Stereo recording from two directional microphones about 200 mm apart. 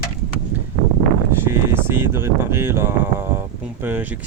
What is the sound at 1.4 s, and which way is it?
Speech, 10° right (ahead or behind).